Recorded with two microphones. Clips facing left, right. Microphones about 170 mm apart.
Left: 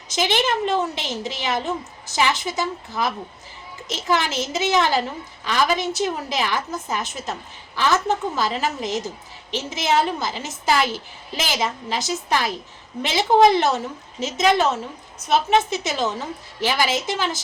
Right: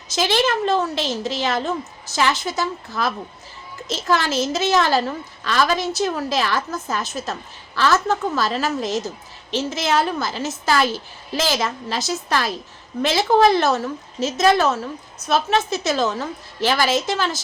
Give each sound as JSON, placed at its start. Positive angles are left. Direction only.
{"t": 0.1, "sound": "a woman's voice", "side_deg": 15}